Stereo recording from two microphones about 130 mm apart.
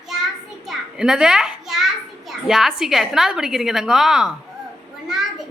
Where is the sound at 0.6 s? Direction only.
Centre (ahead or behind).